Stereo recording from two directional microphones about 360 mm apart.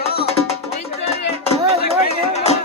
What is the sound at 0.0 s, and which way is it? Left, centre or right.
Music, centre.